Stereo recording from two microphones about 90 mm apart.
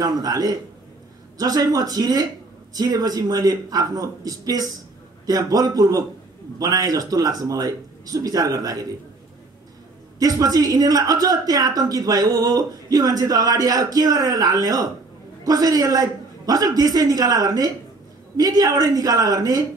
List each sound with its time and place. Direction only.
0.2 s a woman's voice: 45° right (ahead or behind)
10.1 s a woman's voice: 40° right (ahead or behind)